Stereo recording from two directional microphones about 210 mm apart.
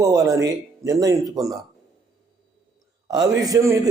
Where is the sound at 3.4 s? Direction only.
15° right (ahead or behind).